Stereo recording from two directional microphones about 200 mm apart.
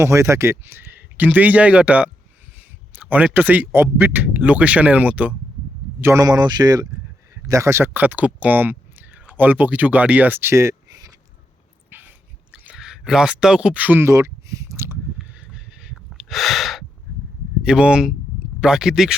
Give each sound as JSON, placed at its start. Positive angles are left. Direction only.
{"t": 0.0, "sound": "speech", "side_deg": -15}
{"t": 11.9, "sound": "dog", "side_deg": -10}
{"t": 12.6, "sound": "speech", "side_deg": -5}
{"t": 15.2, "sound": "a sound", "side_deg": -5}
{"t": 17.6, "sound": "speech", "side_deg": -5}